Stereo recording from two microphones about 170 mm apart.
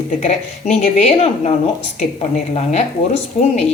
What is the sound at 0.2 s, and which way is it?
A woman's voice, 45° left (ahead or behind).